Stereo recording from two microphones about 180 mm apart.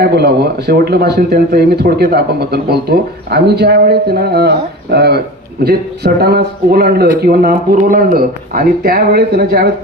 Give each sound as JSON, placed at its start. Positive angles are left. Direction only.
{"t": 0.0, "sound": "speech", "side_deg": -60}